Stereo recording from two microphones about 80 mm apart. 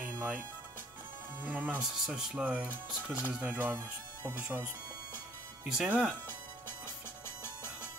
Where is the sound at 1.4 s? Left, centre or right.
Centre.